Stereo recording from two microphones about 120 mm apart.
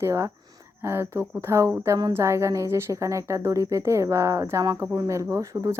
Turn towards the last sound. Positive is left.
turn(degrees=-25)  # may be behind; listen again after turning